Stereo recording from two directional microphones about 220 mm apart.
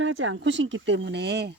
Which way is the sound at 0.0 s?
65° right (ahead or behind).